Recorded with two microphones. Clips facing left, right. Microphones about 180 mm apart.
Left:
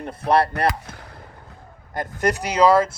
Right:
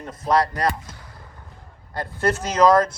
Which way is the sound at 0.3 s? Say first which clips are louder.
Left 1 dB; 30° left (ahead or behind).